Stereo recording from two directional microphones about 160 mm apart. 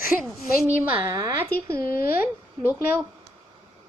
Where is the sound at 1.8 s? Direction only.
65° left (ahead or behind).